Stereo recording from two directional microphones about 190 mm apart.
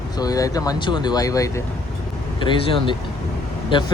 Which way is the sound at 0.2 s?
20° left (ahead or behind).